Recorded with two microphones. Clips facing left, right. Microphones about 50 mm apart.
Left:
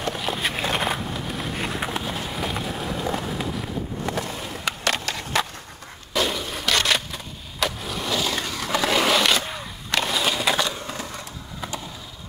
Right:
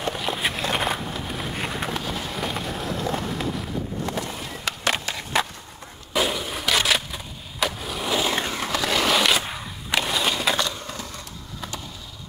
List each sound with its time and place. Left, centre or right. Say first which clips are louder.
0.0 s a sound: even; centre
2.0 s run: left 1 dB; centre
4.8 s skateboard: right 1 dB; right
6.1 s a sound: even; centre
7.6 s skateboard: even; centre
8.1 s skateboard: right 2 dB; right
8.6 s skateboard: left 3 dB; centre